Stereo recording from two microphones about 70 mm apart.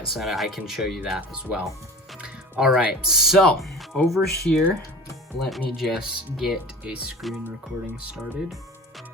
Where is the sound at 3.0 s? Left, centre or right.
Centre.